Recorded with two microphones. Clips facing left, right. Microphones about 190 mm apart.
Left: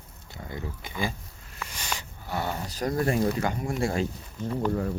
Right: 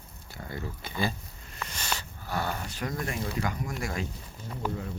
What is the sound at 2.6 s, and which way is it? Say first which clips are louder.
Speech: left 7 dB; 35° left (ahead or behind).